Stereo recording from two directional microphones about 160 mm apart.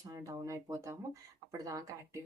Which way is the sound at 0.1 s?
20° right (ahead or behind).